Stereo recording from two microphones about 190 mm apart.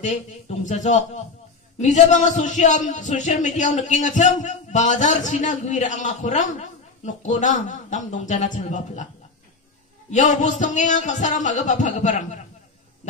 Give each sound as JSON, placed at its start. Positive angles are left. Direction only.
{"t": 0.0, "sound": "speech", "side_deg": 40}
{"t": 10.1, "sound": "speech", "side_deg": 40}